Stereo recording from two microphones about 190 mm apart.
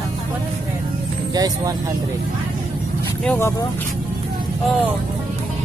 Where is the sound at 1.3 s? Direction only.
20° right (ahead or behind).